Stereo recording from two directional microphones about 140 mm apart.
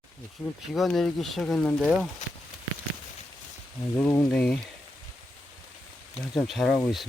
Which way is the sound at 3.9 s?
15° left (ahead or behind).